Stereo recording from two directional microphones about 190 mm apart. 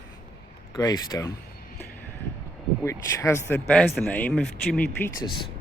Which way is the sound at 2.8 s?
15° left (ahead or behind).